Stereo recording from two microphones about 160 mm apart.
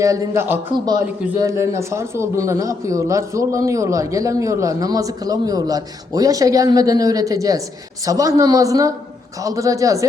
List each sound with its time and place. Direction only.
0.0 s a man's voice: 15° right (ahead or behind)